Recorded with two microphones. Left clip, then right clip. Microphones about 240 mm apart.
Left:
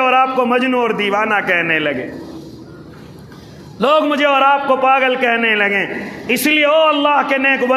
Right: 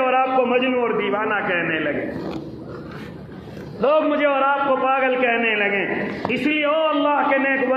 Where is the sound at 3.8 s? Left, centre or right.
Left.